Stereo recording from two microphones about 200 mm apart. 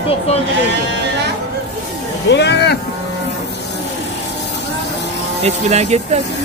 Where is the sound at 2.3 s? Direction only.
60° left (ahead or behind).